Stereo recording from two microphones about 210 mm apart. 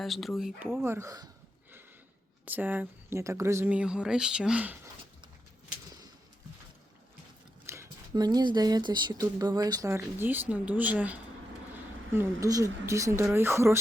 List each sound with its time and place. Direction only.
0.0 s speech: centre (ahead or behind); by 1.3 s 15° right (ahead or behind)
2.4 s speech: 10° right (ahead or behind)
7.7 s speech: 15° right (ahead or behind)